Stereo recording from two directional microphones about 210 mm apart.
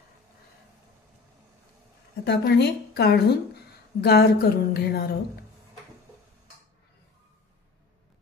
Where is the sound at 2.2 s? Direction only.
50° left (ahead or behind).